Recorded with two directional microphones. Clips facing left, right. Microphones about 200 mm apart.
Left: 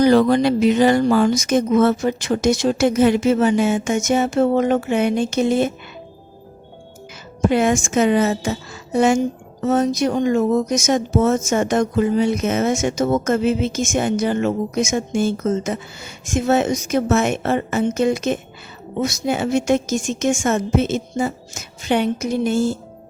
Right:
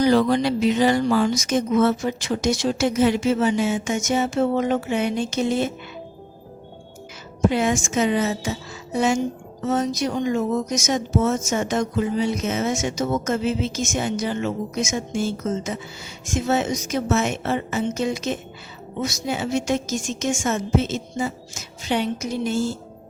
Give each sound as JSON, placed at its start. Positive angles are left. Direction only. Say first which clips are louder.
{"t": 0.0, "sound": "a woman's voice", "louder": "left 4 dB", "side_deg": 55}
{"t": 7.5, "sound": "a woman's voice", "louder": "left 8 dB", "side_deg": 55}